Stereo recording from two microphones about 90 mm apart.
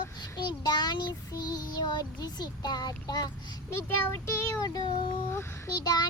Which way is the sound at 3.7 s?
30° left (ahead or behind).